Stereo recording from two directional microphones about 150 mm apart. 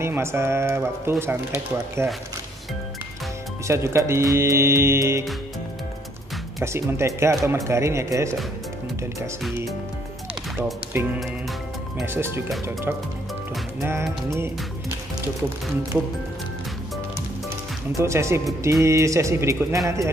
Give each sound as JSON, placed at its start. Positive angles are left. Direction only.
{"t": 0.0, "sound": "speech", "side_deg": -15}
{"t": 3.6, "sound": "speech", "side_deg": -20}
{"t": 6.6, "sound": "speech", "side_deg": -15}
{"t": 10.6, "sound": "speech", "side_deg": -15}
{"t": 13.7, "sound": "speech", "side_deg": -15}
{"t": 14.3, "sound": "music", "side_deg": -15}
{"t": 17.9, "sound": "speech", "side_deg": -20}